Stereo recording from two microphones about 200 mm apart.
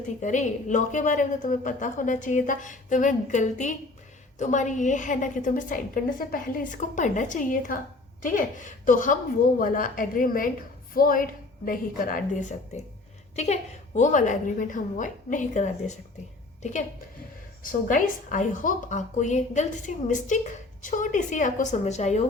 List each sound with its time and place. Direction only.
0.2 s a woman's voice: 40° left (ahead or behind)
17.6 s a woman's voice: 45° left (ahead or behind)